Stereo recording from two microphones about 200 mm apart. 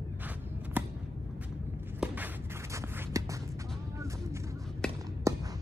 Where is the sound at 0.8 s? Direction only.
10° right (ahead or behind).